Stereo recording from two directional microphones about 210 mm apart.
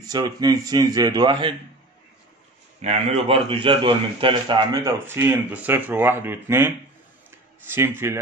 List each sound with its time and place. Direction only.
0.1 s a man's voice: 20° right (ahead or behind)
2.8 s a man's voice: 30° right (ahead or behind); by 6.7 s 10° right (ahead or behind)
7.2 s a sound: 10° right (ahead or behind)